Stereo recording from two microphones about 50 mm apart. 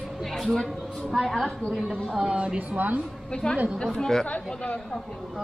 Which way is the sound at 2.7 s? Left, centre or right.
Right.